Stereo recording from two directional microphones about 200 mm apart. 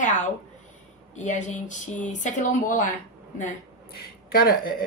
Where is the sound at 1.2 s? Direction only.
35° left (ahead or behind).